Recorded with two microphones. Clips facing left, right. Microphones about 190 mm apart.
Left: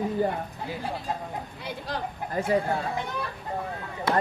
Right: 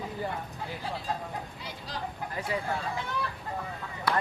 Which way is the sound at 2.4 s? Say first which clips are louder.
Left 9 dB; 45° left (ahead or behind).